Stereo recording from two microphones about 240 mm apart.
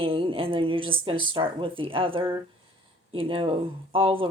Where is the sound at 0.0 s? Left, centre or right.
Right.